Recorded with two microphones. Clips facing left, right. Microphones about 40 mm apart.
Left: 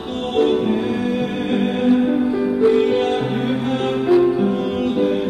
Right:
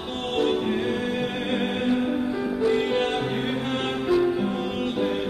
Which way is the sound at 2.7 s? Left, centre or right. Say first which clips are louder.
Left 7 dB; centre.